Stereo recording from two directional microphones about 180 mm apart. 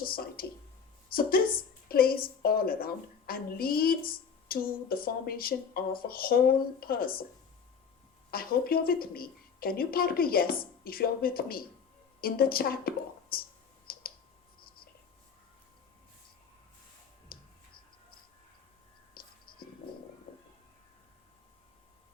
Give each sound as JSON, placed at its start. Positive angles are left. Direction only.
{"t": 0.0, "sound": "a woman's voice", "side_deg": 55}
{"t": 8.3, "sound": "a woman's voice", "side_deg": 55}
{"t": 13.9, "sound": "clicking", "side_deg": 55}
{"t": 17.3, "sound": "clicking", "side_deg": 55}
{"t": 19.1, "sound": "whispering", "side_deg": 55}